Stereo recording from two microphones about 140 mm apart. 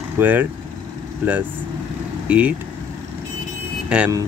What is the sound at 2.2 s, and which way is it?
Speech, 10° right (ahead or behind).